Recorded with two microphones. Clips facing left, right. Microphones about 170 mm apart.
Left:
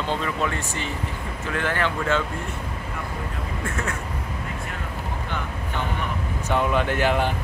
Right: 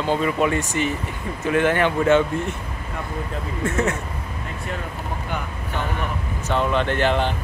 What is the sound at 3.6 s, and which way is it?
Speech, 25° right (ahead or behind).